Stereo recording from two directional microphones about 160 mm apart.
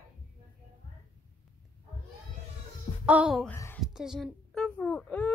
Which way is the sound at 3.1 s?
5° right (ahead or behind).